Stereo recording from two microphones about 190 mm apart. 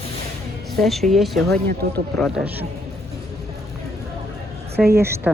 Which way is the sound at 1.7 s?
55° right (ahead or behind).